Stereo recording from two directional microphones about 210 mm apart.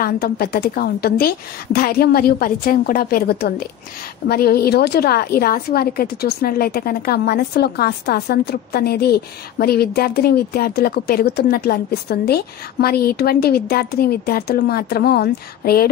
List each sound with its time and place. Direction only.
0.0 s a woman's voice: 45° left (ahead or behind)